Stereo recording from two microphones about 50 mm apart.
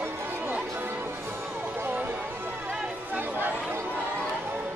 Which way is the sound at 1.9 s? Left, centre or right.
Right.